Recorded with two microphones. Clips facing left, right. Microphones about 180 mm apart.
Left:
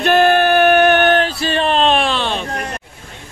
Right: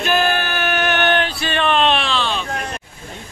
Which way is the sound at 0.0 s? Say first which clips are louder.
Left 7 dB; 55° left (ahead or behind).